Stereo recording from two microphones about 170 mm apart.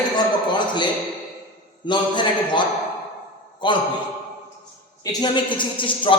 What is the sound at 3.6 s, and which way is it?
Speech, 25° left (ahead or behind).